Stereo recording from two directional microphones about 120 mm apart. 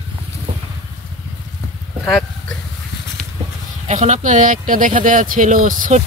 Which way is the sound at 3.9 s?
80° right.